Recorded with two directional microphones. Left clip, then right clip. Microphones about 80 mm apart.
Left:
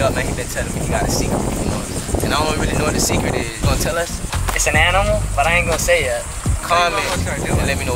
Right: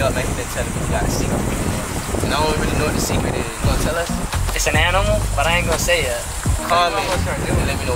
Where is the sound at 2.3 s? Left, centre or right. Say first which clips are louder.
Even; centre.